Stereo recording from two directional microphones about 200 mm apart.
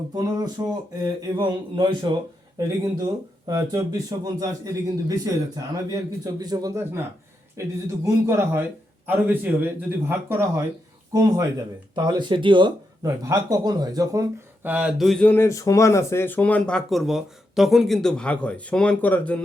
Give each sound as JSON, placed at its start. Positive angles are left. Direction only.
{"t": 0.2, "sound": "speech", "side_deg": -20}